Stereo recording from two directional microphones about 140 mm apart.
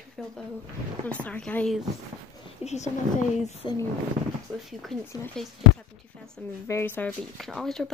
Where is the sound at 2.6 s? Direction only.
55° left (ahead or behind).